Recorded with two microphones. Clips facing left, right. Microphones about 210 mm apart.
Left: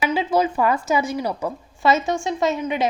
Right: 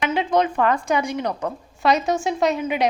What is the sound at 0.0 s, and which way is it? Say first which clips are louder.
A woman's voice: even; 5° left (ahead or behind).